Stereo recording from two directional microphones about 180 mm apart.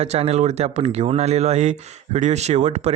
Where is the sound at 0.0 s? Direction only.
35° right (ahead or behind).